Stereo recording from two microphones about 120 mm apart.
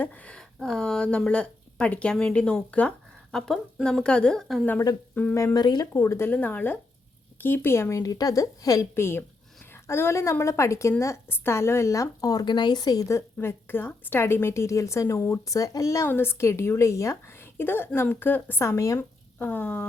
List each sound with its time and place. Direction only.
0.0 s a woman's voice: 10° left (ahead or behind)
5.3 s speech: 25° left (ahead or behind)